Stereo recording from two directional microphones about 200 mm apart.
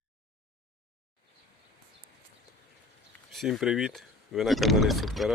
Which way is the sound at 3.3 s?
Centre (ahead or behind).